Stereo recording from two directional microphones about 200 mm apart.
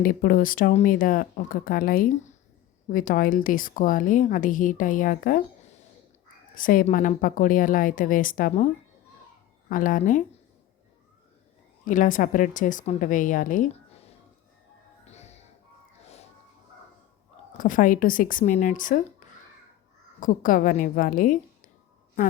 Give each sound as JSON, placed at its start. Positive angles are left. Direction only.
{"t": 0.0, "sound": "a woman's voice", "side_deg": 45}
{"t": 9.6, "sound": "a woman's voice", "side_deg": 45}
{"t": 11.9, "sound": "a woman's voice", "side_deg": 40}
{"t": 15.0, "sound": "music", "side_deg": 35}
{"t": 17.6, "sound": "a woman's voice", "side_deg": 40}
{"t": 20.1, "sound": "a woman's voice", "side_deg": 40}